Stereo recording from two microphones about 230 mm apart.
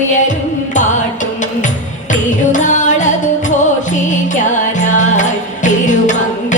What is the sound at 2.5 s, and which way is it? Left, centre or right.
Music, left.